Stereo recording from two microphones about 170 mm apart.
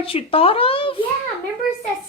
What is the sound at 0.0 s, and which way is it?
Speech, 35° left (ahead or behind).